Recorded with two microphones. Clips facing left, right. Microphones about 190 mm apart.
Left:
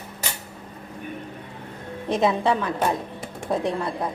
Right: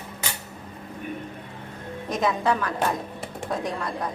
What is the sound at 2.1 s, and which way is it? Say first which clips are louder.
Speech: left 3 dB; 30° left (ahead or behind).